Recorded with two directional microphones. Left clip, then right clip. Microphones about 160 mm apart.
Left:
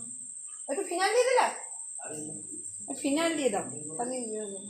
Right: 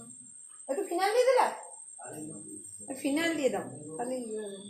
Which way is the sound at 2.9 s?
30° left (ahead or behind).